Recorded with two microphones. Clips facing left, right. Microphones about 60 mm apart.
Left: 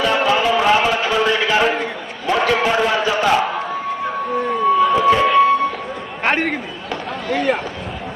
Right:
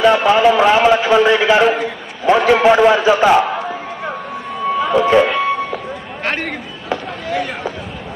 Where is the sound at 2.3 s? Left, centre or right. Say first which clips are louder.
Right 5 dB; centre.